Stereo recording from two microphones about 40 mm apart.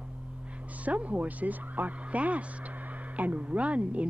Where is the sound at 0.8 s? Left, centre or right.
Right.